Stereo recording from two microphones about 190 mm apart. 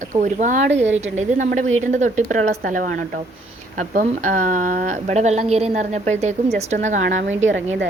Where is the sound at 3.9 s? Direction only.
45° right (ahead or behind).